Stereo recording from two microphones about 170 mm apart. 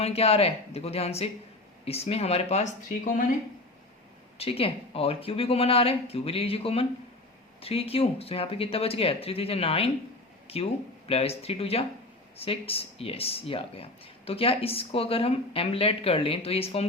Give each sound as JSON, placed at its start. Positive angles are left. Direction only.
{"t": 0.0, "sound": "speech", "side_deg": 35}
{"t": 4.4, "sound": "speech", "side_deg": 35}